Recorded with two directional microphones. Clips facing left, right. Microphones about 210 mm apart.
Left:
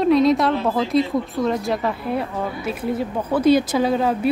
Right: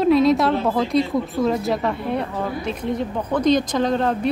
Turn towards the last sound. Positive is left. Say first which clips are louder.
# left 1 dB
turn(degrees=5)  # may be behind; listen again after turning